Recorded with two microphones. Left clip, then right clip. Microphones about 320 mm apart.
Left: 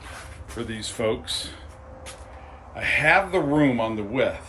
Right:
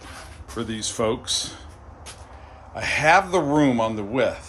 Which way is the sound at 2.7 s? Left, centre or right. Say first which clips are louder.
Right 2 dB; centre.